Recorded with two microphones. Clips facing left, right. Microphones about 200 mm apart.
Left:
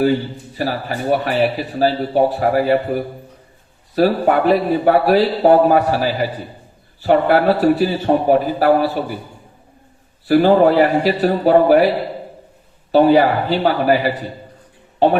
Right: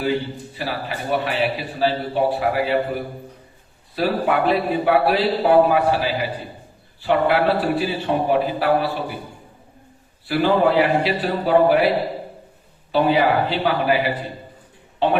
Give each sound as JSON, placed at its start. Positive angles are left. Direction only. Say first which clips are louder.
{"t": 0.5, "sound": "a man's voice", "louder": "left 7 dB", "side_deg": 45}
{"t": 10.2, "sound": "a man's voice", "louder": "left 6 dB", "side_deg": 45}
{"t": 12.9, "sound": "a man's voice", "louder": "left 6 dB", "side_deg": 45}